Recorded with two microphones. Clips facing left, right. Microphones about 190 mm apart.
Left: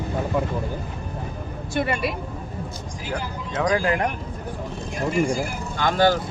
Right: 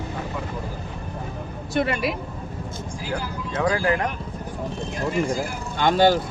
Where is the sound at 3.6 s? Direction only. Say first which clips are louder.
Left 1 dB; 15° left (ahead or behind).